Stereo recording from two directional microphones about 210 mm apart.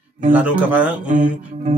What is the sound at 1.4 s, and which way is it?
Speech, 30° right (ahead or behind).